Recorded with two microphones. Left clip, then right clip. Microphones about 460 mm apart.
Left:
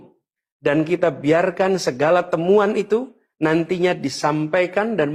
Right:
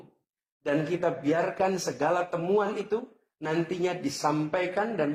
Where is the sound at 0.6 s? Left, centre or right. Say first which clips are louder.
Left 9 dB; left.